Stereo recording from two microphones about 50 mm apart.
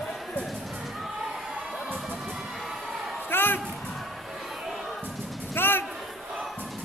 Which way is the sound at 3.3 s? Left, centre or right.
Left.